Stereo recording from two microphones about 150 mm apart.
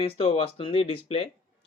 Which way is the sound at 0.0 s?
40° left (ahead or behind).